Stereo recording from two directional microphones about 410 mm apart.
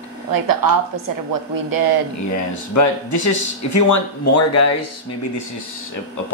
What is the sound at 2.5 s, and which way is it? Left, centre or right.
Speech, left.